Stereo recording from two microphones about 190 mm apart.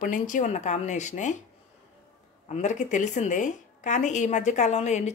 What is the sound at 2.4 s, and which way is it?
A woman's voice, 40° left (ahead or behind).